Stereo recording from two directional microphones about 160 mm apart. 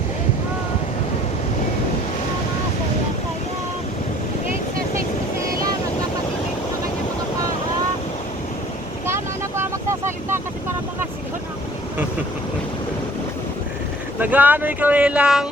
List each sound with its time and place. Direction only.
9.0 s vehicle: 15° right (ahead or behind)
14.2 s speech: 10° right (ahead or behind)